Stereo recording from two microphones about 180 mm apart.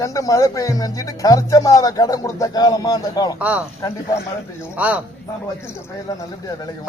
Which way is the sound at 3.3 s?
10° right (ahead or behind).